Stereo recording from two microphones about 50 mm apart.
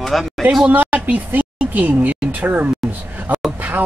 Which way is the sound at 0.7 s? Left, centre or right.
Right.